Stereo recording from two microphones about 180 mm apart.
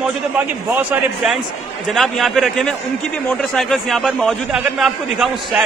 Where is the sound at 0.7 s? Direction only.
5° right (ahead or behind).